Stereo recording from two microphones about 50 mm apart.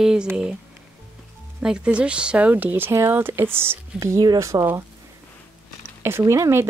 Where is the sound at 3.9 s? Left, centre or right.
Right.